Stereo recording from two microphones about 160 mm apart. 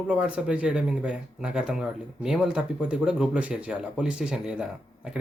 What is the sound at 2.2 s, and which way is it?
Speech, 5° right (ahead or behind).